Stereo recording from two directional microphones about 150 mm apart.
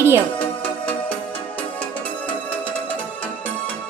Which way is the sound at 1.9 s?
10° left (ahead or behind).